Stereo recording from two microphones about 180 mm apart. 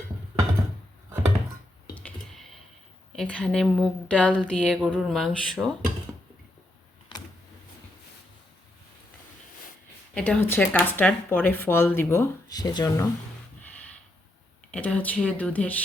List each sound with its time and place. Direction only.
2.0 s clicking: 5° left (ahead or behind)
3.2 s speech: 5° left (ahead or behind)
7.1 s vehicle: 25° left (ahead or behind)
10.2 s speech: 5° left (ahead or behind); by 13.1 s 20° left (ahead or behind)
13.6 s snort: 10° left (ahead or behind)
14.7 s speech: 5° left (ahead or behind)